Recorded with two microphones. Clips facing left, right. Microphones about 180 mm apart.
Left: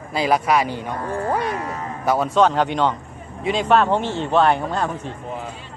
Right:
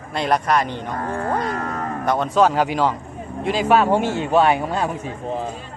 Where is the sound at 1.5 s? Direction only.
55° right (ahead or behind).